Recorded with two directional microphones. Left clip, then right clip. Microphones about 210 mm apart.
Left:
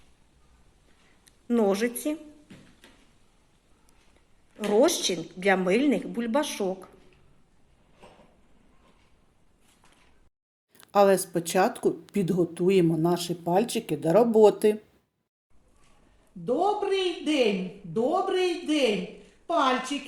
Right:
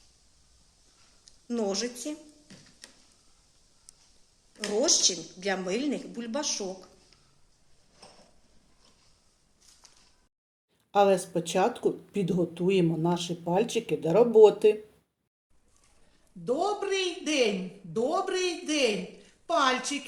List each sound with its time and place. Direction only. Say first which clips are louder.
1.5 s a woman's voice: left 6 dB; 15° left (ahead or behind)
4.6 s a woman's voice: left 3 dB; 15° left (ahead or behind)
10.9 s speech: left 2 dB; 45° left (ahead or behind)
16.4 s a woman's voice: left 3 dB; 15° right (ahead or behind)